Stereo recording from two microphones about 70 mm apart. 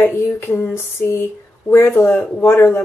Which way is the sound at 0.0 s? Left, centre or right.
Left.